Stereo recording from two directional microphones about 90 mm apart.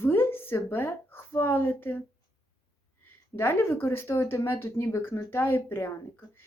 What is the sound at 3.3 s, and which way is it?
Speech, 25° left (ahead or behind).